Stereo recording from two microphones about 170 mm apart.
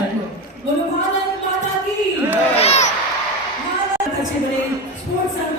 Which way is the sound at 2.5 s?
40° left (ahead or behind).